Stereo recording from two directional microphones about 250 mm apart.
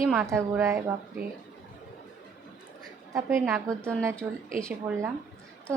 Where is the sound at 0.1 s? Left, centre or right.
Centre.